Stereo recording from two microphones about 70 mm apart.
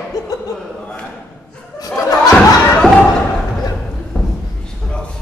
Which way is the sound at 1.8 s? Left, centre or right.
Left.